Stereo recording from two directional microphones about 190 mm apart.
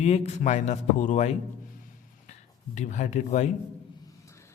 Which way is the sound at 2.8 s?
40° left (ahead or behind).